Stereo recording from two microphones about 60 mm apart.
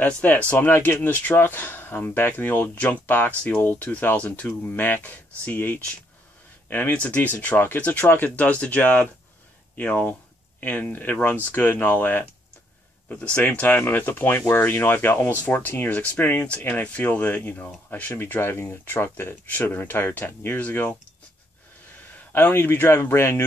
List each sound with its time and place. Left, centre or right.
0.0 s speech: left
13.6 s speech: left
18.2 s speech: left
20.6 s speech: left
22.1 s speech: left